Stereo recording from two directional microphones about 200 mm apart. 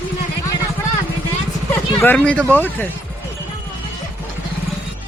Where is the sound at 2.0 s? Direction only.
10° left (ahead or behind).